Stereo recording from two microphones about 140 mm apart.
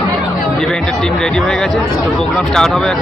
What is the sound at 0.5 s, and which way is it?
Speech, 5° left (ahead or behind).